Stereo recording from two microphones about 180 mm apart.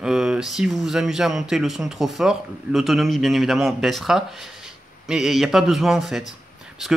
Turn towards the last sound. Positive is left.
turn(degrees=0)  # may be behind; listen again after turning